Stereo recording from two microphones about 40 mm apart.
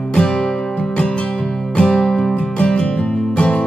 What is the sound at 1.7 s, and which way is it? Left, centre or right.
Music, left.